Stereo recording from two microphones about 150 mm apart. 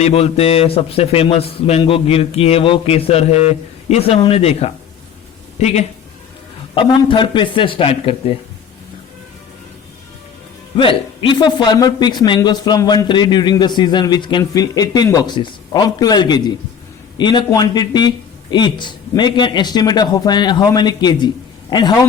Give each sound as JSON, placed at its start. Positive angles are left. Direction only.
{"t": 0.0, "sound": "a man's voice", "side_deg": 40}
{"t": 6.7, "sound": "a man's voice", "side_deg": 35}
{"t": 10.8, "sound": "a man's voice", "side_deg": 35}